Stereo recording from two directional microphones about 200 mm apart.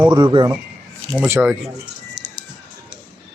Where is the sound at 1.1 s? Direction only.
10° right (ahead or behind).